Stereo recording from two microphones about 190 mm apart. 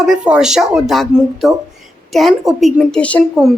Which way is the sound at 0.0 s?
5° right (ahead or behind).